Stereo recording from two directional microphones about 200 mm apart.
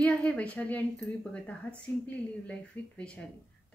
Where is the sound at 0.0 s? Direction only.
5° left (ahead or behind).